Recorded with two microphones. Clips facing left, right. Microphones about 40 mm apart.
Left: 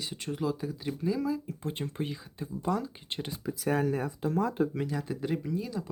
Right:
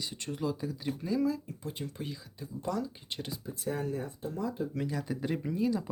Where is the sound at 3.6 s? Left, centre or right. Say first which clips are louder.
Left 6 dB; left.